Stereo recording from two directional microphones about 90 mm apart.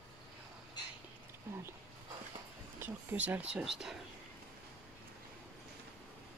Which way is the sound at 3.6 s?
5° right (ahead or behind).